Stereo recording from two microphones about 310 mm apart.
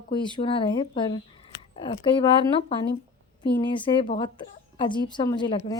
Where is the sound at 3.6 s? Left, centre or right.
Centre.